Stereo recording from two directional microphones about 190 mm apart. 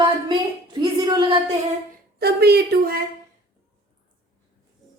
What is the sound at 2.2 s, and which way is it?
Speech, 55° right (ahead or behind).